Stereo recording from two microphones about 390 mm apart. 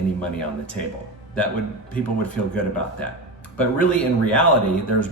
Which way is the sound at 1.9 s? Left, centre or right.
Centre.